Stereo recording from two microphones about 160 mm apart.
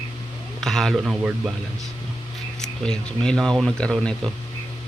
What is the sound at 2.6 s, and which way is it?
Speech, 5° left (ahead or behind).